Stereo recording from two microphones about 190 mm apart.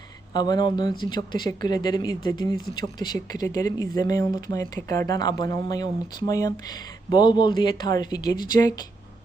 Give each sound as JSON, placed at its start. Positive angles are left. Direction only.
{"t": 0.3, "sound": "speech", "side_deg": 20}